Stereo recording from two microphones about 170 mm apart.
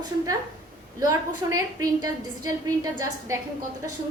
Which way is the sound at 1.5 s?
20° right (ahead or behind).